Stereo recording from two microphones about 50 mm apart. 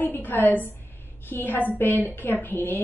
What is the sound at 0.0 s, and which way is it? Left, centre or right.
A woman's voice, left.